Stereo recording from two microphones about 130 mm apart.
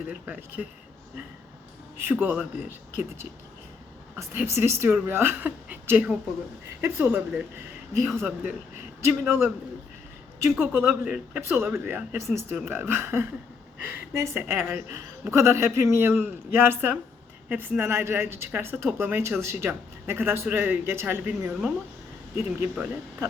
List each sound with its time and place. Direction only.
0.1 s speech: 10° right (ahead or behind)
2.0 s a man's voice: 15° right (ahead or behind)
10.6 s a man's voice: 15° right (ahead or behind)